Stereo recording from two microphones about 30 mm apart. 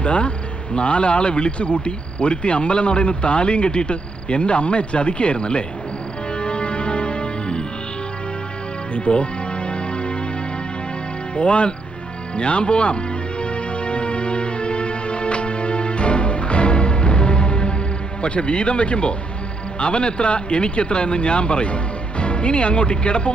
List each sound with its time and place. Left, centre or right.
0.0 s speech: left
6.3 s music: left
9.1 s speech: left
9.6 s music: left
11.3 s speech: left
13.4 s music: left
18.2 s speech: left